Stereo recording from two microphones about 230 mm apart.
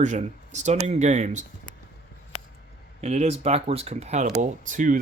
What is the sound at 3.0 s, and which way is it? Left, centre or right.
Speech, right.